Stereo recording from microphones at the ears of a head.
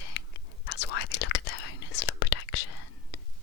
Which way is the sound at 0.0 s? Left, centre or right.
Left.